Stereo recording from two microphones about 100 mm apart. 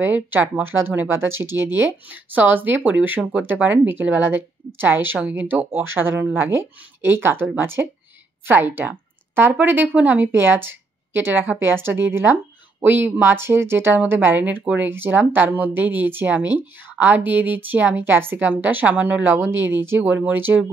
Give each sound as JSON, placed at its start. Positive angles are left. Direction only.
{"t": 0.0, "sound": "a woman's voice", "side_deg": -20}